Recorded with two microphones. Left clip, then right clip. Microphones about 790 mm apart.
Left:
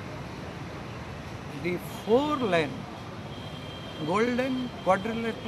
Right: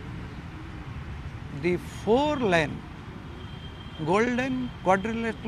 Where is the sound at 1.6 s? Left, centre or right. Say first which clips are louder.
Right 3 dB; right.